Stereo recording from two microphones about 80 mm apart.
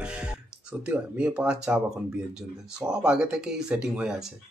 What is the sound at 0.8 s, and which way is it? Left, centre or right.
Speech, centre.